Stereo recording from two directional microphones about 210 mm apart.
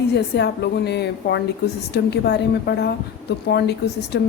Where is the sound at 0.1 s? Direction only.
50° left (ahead or behind).